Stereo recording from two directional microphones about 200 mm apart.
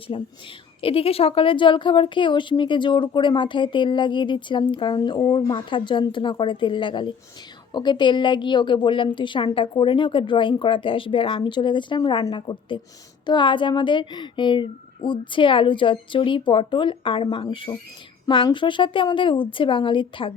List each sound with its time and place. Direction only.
0.1 s a woman's voice: 30° left (ahead or behind)